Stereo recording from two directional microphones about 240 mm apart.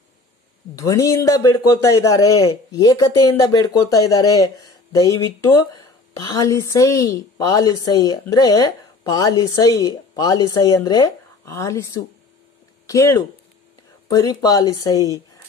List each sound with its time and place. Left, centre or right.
0.7 s a woman's voice: centre